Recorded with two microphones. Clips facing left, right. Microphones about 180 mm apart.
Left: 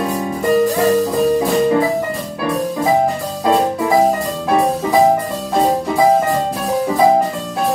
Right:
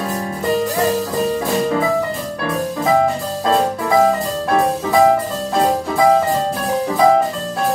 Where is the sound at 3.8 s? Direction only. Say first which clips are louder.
Even; 15° left (ahead or behind).